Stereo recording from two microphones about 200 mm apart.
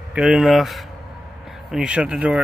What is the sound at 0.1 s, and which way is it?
Speech, centre (ahead or behind).